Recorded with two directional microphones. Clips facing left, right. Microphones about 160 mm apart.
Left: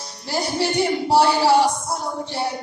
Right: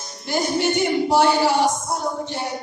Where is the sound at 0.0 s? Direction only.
35° left (ahead or behind).